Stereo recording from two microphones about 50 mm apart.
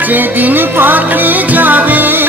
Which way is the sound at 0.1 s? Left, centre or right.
Right.